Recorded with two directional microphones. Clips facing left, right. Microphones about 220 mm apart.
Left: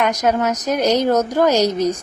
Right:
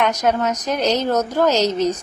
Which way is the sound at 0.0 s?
10° left (ahead or behind).